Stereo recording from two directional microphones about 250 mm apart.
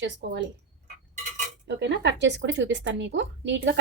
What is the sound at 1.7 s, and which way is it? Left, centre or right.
Speech, right.